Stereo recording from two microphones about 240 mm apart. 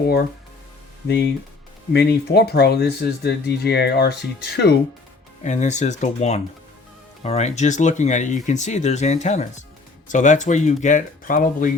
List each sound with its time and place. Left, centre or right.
1.0 s speech: left
5.4 s speech: left